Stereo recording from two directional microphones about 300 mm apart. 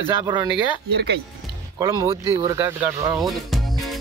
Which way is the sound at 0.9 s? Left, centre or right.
Right.